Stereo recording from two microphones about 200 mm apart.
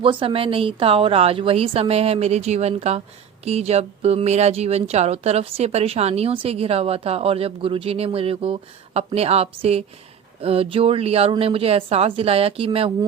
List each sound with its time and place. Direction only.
0.0 s a woman's voice: 25° right (ahead or behind)